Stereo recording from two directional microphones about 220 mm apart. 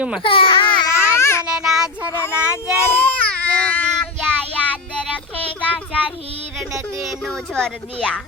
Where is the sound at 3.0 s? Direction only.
5° left (ahead or behind).